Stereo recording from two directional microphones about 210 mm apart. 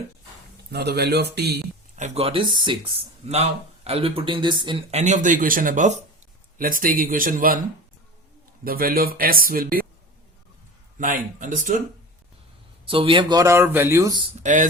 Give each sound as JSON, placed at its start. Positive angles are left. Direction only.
{"t": 0.7, "sound": "speech", "side_deg": -50}
{"t": 2.0, "sound": "speech", "side_deg": -30}
{"t": 8.6, "sound": "speech", "side_deg": -45}
{"t": 10.9, "sound": "speech", "side_deg": -40}
{"t": 12.8, "sound": "speech", "side_deg": -25}
{"t": 14.4, "sound": "speech", "side_deg": -35}